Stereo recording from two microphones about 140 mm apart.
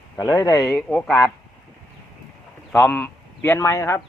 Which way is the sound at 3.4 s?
20° left (ahead or behind).